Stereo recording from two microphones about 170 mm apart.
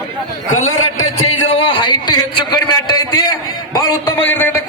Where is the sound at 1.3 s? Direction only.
35° left (ahead or behind).